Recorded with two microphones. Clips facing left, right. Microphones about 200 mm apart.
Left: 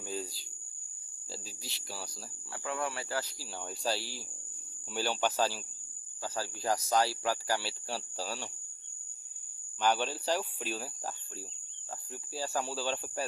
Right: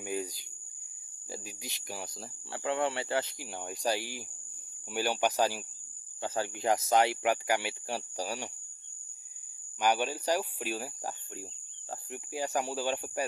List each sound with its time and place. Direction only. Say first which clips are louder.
0.0 s a sound: right 4 dB; 15° right (ahead or behind)
1.3 s cricket: right 3 dB; 15° right (ahead or behind)
2.5 s speech: right 5 dB; 25° right (ahead or behind)
9.8 s speech: right 1 dB; 10° right (ahead or behind)